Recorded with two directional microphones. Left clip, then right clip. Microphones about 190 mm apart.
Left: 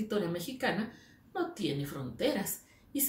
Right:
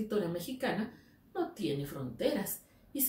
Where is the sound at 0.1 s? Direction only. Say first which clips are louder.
Left 1 dB; 15° left (ahead or behind).